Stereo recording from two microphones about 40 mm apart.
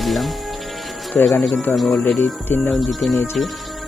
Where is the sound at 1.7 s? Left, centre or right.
Left.